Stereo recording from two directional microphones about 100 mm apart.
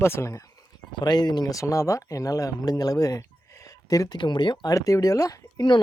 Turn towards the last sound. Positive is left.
turn(degrees=35)  # may be behind; listen again after turning